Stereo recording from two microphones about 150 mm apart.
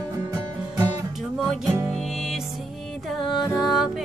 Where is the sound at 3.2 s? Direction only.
30° left (ahead or behind).